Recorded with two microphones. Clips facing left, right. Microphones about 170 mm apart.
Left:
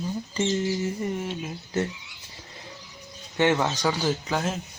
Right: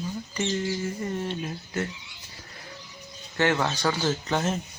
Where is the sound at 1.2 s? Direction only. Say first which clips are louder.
Right 1 dB; 10° left (ahead or behind).